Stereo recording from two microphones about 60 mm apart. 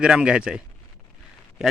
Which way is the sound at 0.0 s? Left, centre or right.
Centre.